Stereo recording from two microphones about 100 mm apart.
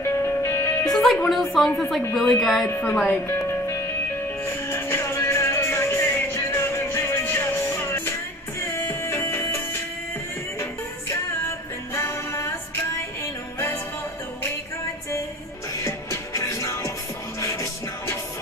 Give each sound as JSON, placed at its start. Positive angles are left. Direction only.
{"t": 0.0, "sound": "music", "side_deg": 25}
{"t": 0.9, "sound": "a woman's voice", "side_deg": 5}
{"t": 2.8, "sound": "a woman's voice", "side_deg": 15}
{"t": 3.4, "sound": "music", "side_deg": 25}
{"t": 11.9, "sound": "music", "side_deg": 25}
{"t": 15.8, "sound": "music", "side_deg": 30}